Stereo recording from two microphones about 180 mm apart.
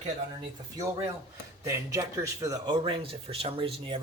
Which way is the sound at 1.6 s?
15° right (ahead or behind).